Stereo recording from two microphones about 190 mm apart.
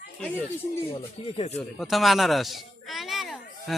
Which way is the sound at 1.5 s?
Centre (ahead or behind).